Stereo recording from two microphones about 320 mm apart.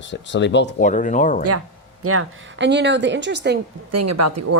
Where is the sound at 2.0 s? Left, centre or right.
Right.